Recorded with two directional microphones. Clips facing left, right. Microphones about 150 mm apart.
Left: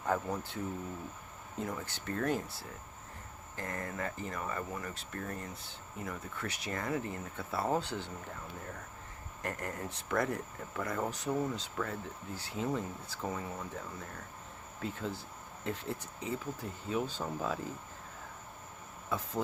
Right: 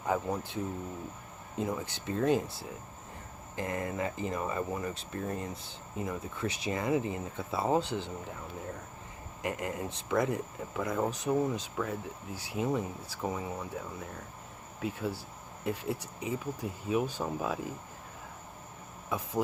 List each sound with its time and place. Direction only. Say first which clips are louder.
0.0 s speech: right 2 dB; 15° right (ahead or behind)
3.5 s speech: right 6 dB; 15° right (ahead or behind)
9.4 s speech: right 4 dB; 15° right (ahead or behind)